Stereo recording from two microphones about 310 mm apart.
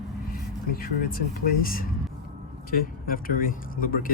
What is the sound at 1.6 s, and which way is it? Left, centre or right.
Speech, left.